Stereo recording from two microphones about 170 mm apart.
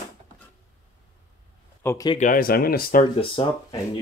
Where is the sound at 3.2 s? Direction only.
30° left (ahead or behind).